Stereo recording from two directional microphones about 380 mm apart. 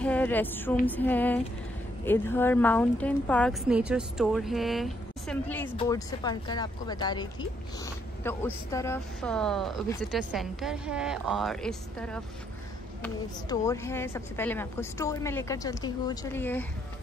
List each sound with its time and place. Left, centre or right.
0.0 s a woman's voice: centre